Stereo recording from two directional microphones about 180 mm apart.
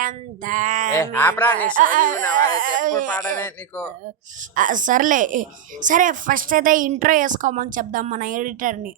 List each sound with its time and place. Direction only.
0.0 s speech: 45° right (ahead or behind)
0.9 s speech: 15° left (ahead or behind)
1.7 s speech: 45° right (ahead or behind)
2.3 s a sound: 50° right (ahead or behind)
3.3 s speech: 15° left (ahead or behind)
4.5 s speech: 45° right (ahead or behind)